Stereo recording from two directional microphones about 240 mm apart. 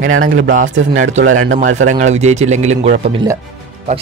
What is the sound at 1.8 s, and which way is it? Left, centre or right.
Speech, right.